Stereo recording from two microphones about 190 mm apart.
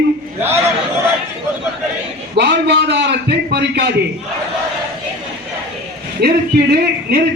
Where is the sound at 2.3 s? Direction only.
65° right (ahead or behind).